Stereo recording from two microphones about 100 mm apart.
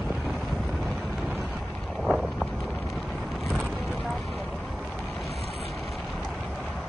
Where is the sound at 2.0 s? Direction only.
Centre (ahead or behind).